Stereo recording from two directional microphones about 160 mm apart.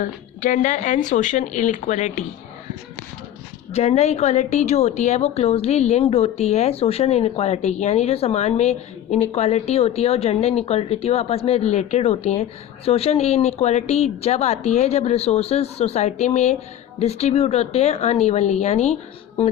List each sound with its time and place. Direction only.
0.0 s speech: 55° left (ahead or behind)
3.7 s a woman's voice: 40° left (ahead or behind)